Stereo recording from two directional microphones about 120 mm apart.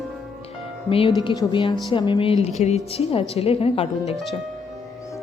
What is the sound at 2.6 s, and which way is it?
Speech, 70° left (ahead or behind).